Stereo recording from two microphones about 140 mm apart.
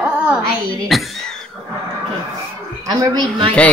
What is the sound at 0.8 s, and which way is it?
Speech, centre (ahead or behind).